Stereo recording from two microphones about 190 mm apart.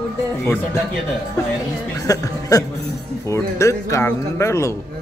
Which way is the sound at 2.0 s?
15° left (ahead or behind).